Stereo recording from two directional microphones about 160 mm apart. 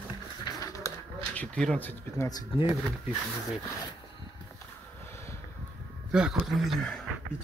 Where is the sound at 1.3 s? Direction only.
5° left (ahead or behind).